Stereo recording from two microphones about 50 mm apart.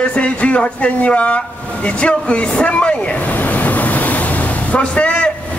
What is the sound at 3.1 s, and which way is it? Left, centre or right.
Ocean, left.